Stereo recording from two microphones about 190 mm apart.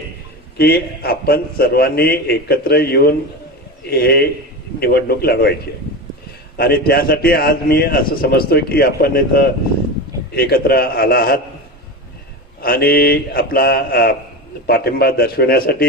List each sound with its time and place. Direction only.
0.6 s a man's voice: 55° left (ahead or behind)
12.6 s a man's voice: 55° left (ahead or behind)